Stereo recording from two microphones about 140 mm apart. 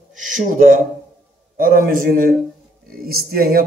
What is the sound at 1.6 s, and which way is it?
Speech, 90° right.